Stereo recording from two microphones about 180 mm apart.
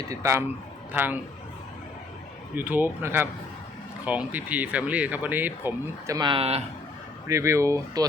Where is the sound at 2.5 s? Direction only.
10° right (ahead or behind); by 6.6 s 35° right (ahead or behind).